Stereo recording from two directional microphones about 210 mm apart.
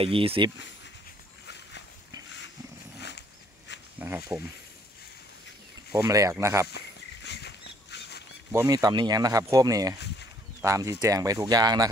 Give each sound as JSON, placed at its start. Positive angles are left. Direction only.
{"t": 0.0, "sound": "speech", "side_deg": -25}
{"t": 3.0, "sound": "a sound", "side_deg": 55}
{"t": 4.0, "sound": "speech", "side_deg": -10}
{"t": 5.9, "sound": "speech", "side_deg": -15}
{"t": 7.2, "sound": "a sound", "side_deg": 55}
{"t": 8.5, "sound": "speech", "side_deg": -15}